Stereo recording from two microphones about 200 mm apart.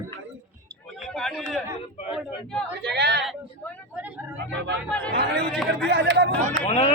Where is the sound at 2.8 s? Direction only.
55° right (ahead or behind).